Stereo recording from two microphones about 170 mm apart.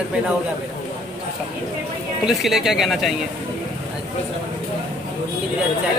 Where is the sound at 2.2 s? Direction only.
Centre (ahead or behind).